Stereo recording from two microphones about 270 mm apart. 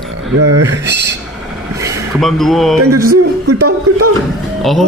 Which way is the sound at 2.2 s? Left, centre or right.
Centre.